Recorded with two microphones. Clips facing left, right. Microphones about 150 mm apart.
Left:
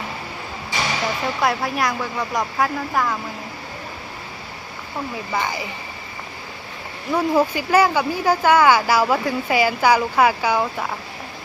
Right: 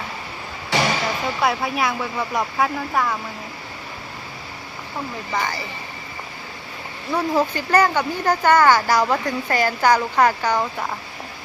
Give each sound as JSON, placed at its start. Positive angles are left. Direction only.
{"t": 0.7, "sound": "a sound", "side_deg": -70}
{"t": 1.4, "sound": "speech", "side_deg": 0}
{"t": 5.3, "sound": "speech", "side_deg": 10}
{"t": 7.1, "sound": "speech", "side_deg": 10}